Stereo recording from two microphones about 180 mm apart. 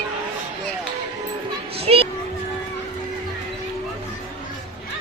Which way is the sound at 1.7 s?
30° right (ahead or behind).